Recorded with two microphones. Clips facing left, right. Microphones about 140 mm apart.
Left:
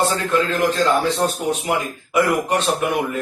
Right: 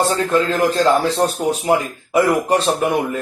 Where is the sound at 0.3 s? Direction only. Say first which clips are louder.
Right 2 dB; 35° right (ahead or behind).